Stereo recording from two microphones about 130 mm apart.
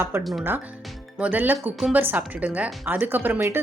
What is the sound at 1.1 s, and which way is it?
Speech, 10° right (ahead or behind).